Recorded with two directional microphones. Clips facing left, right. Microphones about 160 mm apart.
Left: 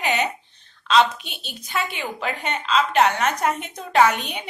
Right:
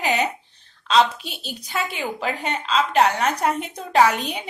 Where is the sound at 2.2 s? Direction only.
35° right (ahead or behind).